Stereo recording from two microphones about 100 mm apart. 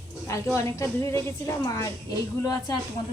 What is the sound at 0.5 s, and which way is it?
A woman's voice, 30° left (ahead or behind).